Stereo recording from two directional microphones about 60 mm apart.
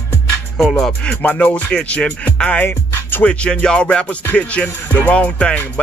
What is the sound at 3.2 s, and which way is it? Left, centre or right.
Music, centre.